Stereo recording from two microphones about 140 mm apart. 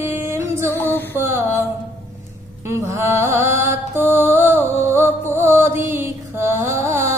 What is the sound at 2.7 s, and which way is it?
Music, 20° right (ahead or behind).